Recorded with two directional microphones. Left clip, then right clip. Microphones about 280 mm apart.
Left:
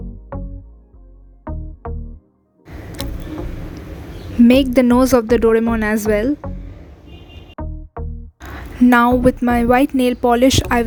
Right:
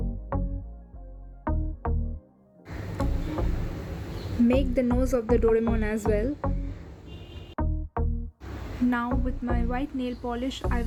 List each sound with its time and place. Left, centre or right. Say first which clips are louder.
0.3 s music: left 2 dB; centre
4.4 s speech: left 12 dB; left
7.5 s music: left 1 dB; centre
8.9 s speech: left 18 dB; left